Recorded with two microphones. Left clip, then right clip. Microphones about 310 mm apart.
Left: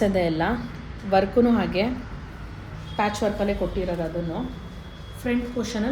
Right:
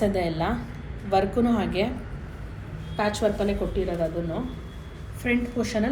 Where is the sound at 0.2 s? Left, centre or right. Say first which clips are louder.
Left 3 dB; left.